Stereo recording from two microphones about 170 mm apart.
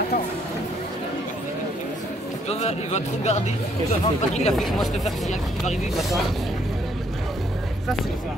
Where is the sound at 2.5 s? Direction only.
40° left (ahead or behind).